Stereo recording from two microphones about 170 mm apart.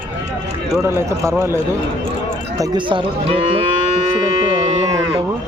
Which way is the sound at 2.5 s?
25° right (ahead or behind).